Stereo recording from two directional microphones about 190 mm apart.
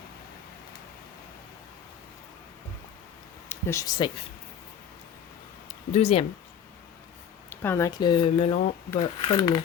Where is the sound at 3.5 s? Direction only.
15° left (ahead or behind).